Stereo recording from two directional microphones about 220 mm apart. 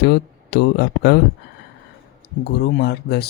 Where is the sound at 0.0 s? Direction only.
50° left (ahead or behind).